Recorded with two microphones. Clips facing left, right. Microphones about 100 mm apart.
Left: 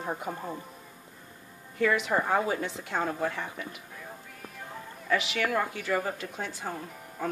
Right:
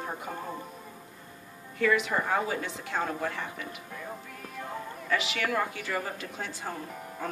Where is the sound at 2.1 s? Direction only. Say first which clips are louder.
Left 2 dB; 30° left (ahead or behind).